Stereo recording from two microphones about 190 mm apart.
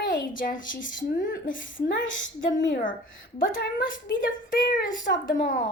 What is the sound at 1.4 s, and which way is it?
Speech, 80° left.